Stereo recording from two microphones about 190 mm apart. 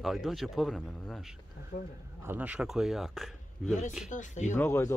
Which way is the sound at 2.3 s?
5° right (ahead or behind).